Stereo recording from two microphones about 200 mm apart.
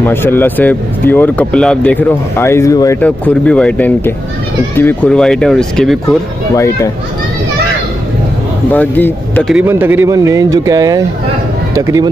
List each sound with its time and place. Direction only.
0.0 s speech: 10° left (ahead or behind)
6.0 s speech: 15° left (ahead or behind)
8.7 s speech: 10° left (ahead or behind)
9.5 s speech: 10° right (ahead or behind)